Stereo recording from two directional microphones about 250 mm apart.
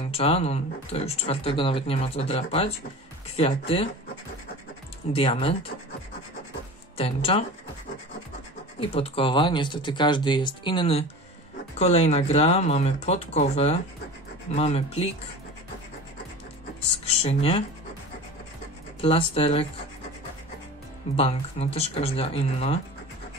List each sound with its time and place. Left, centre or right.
0.1 s speech: left
5.1 s speech: left
7.0 s speech: left
8.7 s speech: left
17.1 s speech: left
18.9 s speech: left
21.2 s speech: left